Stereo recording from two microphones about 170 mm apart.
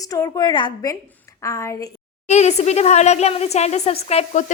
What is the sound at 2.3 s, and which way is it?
Speech, 40° left (ahead or behind).